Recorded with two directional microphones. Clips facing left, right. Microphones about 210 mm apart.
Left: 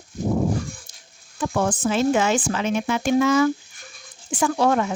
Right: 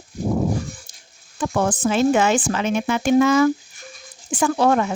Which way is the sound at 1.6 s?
60° right (ahead or behind).